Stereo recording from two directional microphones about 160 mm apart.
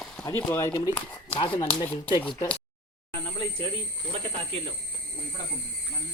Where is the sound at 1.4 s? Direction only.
30° left (ahead or behind).